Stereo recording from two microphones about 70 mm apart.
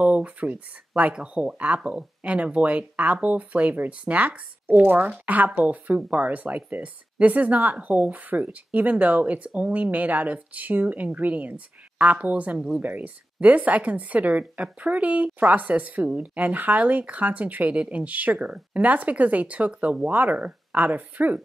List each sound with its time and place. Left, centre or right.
0.0 s a woman's voice: centre
12.5 s speech: centre
12.8 s a woman's voice: right